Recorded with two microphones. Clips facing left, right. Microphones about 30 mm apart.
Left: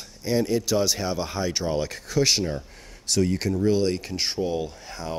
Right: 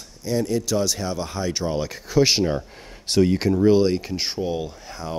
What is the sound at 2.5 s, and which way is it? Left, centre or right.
Speech, right.